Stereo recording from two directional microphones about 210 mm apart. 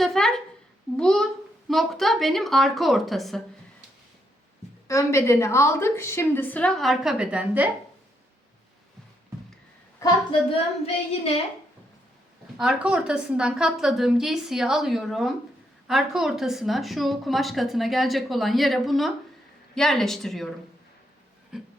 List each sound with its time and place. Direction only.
0.0 s a woman's voice: centre (ahead or behind)
4.9 s a woman's voice: 15° left (ahead or behind); by 7.7 s 5° right (ahead or behind)
10.0 s a woman's voice: 15° left (ahead or behind)
12.5 s a woman's voice: 5° right (ahead or behind)
21.5 s a sound: 5° right (ahead or behind)